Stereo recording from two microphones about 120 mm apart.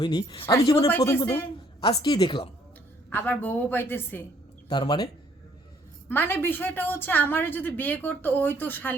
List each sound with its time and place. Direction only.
0.0 s a woman's voice: 40° left (ahead or behind)
0.9 s speech: 20° left (ahead or behind)
2.0 s a woman's voice: 35° left (ahead or behind)
3.1 s a woman's voice: 15° left (ahead or behind)
4.7 s a woman's voice: 40° left (ahead or behind)
6.1 s a woman's voice: 15° left (ahead or behind)